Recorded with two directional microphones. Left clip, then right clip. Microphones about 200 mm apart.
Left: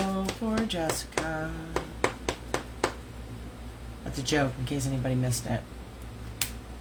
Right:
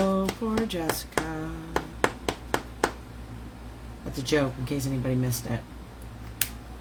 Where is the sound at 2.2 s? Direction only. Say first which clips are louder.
Right 3 dB; 45° right (ahead or behind).